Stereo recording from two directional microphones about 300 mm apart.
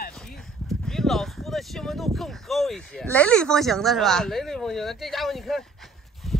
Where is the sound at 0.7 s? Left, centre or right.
Centre.